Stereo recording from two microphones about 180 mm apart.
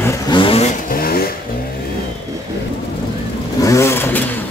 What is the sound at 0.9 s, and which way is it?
Vehicle, 55° left (ahead or behind).